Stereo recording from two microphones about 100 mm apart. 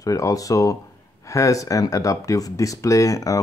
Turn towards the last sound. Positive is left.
turn(degrees=35)  # may be behind; listen again after turning